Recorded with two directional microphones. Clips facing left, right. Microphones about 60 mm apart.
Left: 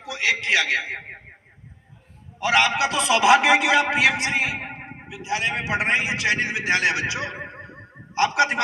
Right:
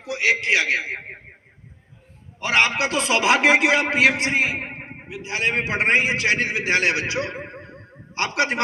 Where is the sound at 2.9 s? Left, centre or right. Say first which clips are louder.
Left 2 dB; right.